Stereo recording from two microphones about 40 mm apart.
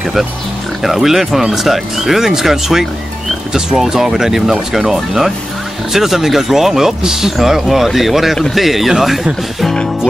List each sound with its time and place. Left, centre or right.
0.8 s speech: centre